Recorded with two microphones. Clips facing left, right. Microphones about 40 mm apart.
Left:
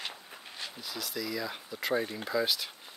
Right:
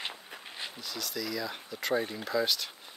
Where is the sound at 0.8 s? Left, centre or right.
Centre.